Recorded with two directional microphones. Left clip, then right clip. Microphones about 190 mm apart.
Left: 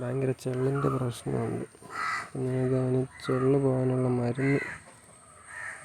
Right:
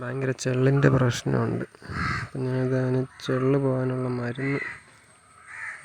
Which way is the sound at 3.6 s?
25° right (ahead or behind).